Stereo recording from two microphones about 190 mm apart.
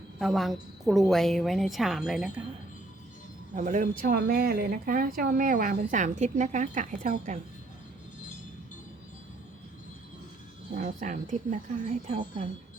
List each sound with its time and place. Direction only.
0.2 s a woman's voice: centre (ahead or behind)
3.5 s speech: 40° right (ahead or behind)
10.8 s speech: 40° right (ahead or behind)